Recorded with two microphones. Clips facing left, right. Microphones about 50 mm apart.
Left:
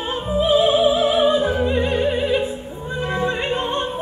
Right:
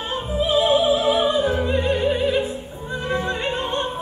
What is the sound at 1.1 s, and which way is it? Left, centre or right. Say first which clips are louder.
Music: left 2 dB; centre.